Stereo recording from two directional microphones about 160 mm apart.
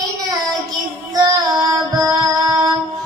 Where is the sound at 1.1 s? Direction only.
25° right (ahead or behind).